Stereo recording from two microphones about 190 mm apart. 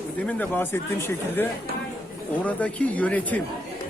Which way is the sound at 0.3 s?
10° left (ahead or behind).